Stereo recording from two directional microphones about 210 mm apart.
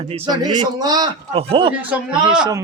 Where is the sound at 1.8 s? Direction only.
5° right (ahead or behind).